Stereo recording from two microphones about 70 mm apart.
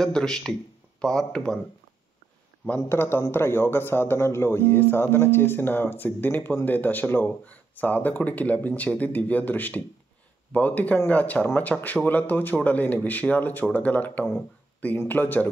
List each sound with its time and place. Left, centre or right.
0.0 s a man's voice: centre
2.8 s a man's voice: left